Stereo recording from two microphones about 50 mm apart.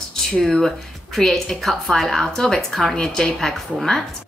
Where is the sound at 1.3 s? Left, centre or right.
Centre.